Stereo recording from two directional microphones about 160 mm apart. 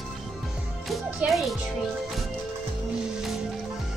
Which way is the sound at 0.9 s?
Centre (ahead or behind).